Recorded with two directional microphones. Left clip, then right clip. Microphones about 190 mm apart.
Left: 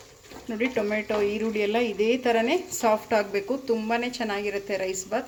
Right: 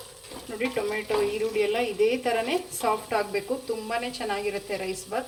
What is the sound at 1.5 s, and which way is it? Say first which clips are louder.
A woman's voice: even; 50° left (ahead or behind).